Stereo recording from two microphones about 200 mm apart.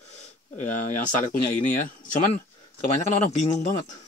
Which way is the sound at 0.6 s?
40° left (ahead or behind).